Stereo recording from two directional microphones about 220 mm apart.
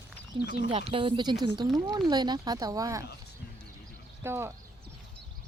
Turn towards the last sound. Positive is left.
turn(degrees=-10)  # may be behind; listen again after turning